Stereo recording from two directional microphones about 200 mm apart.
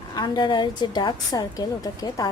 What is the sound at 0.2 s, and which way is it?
A woman's voice, 20° left (ahead or behind).